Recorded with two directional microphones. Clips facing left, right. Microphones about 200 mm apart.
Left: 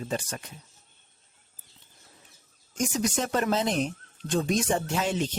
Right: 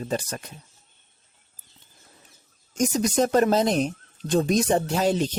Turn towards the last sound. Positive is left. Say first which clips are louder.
# right 5 dB
turn(degrees=-40)  # may be behind; listen again after turning